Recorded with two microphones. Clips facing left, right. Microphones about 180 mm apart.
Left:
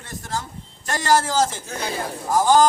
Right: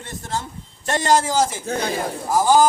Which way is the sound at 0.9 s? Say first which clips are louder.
Right 2 dB; 20° right (ahead or behind).